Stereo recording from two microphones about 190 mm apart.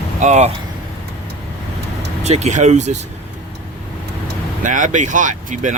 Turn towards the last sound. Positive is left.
turn(degrees=-40)  # may be behind; listen again after turning